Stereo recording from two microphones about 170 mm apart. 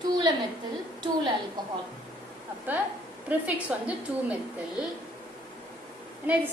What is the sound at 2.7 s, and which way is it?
A woman's voice, 10° right (ahead or behind).